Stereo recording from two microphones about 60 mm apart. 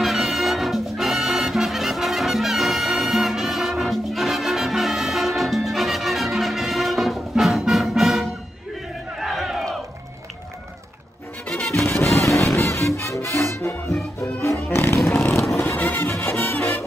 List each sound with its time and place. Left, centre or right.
0.0 s music: centre
9.2 s battle cry: centre
11.7 s music: left
15.5 s music: left